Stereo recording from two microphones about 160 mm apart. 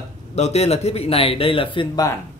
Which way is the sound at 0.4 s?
45° left (ahead or behind).